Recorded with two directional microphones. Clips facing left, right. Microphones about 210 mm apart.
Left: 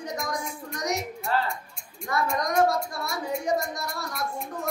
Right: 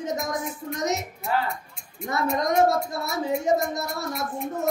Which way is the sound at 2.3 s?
25° right (ahead or behind).